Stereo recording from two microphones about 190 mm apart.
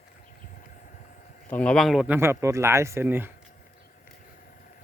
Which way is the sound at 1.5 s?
5° left (ahead or behind).